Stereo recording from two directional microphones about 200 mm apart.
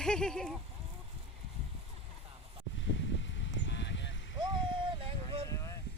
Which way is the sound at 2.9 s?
65° left (ahead or behind).